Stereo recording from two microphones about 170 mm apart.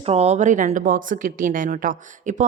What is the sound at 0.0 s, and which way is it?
A woman's voice, 40° right (ahead or behind).